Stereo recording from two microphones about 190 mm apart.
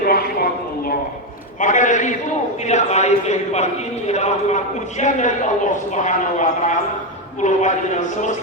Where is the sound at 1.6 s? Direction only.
40° left (ahead or behind).